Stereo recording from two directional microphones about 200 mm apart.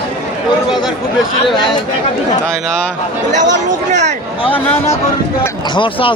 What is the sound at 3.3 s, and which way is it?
Speech, 40° right (ahead or behind).